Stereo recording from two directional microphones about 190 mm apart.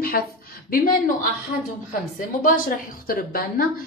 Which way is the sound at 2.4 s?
50° left (ahead or behind).